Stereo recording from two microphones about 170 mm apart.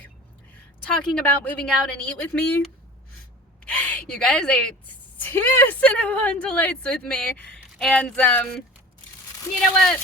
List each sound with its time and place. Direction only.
0.9 s speech: 5° left (ahead or behind)
3.7 s speech: 10° left (ahead or behind)